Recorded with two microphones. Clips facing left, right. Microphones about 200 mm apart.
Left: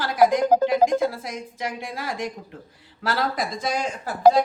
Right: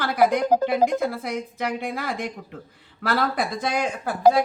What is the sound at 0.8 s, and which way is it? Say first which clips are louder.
Speech: left 2 dB; 55° left (ahead or behind).